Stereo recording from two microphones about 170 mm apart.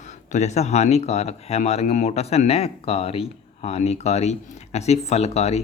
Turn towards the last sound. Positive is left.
turn(degrees=40)  # may be behind; listen again after turning